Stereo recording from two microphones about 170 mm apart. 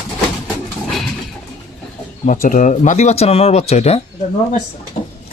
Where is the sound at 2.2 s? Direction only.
50° left (ahead or behind).